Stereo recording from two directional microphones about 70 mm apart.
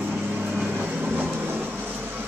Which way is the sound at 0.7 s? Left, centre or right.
Right.